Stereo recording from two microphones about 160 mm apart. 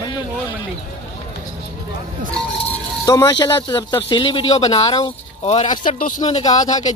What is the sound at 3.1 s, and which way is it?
Speech, 25° left (ahead or behind).